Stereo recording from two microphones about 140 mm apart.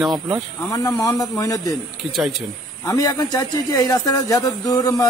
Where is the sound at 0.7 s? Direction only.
25° left (ahead or behind).